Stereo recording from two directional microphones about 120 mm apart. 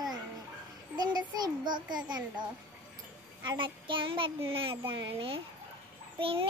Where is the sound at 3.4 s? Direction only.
40° right (ahead or behind).